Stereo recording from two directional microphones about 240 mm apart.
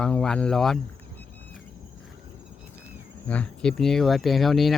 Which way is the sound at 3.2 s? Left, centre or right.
Centre.